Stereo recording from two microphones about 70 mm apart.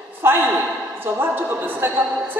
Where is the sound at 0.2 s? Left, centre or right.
Right.